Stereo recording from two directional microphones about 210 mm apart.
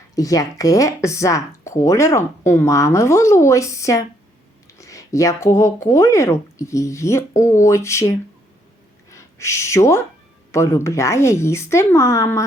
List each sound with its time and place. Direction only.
0.2 s speech: 15° left (ahead or behind)
7.3 s speech: 35° left (ahead or behind)
7.6 s speech: 15° left (ahead or behind)